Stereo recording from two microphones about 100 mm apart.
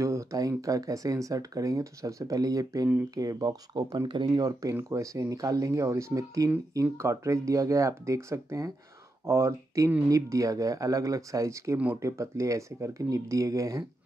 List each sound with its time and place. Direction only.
0.0 s speech: 30° right (ahead or behind)